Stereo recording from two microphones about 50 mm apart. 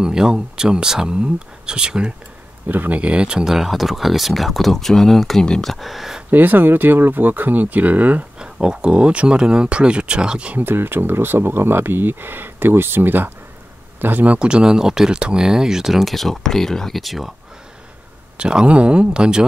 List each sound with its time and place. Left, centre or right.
0.0 s speech: centre
2.7 s speech: right
3.0 s speech: right; by 5.7 s centre
5.7 s speech: centre
6.3 s speech: right
8.4 s speech: centre
10.5 s speech: right
14.0 s speech: right; by 17.3 s centre
18.4 s speech: centre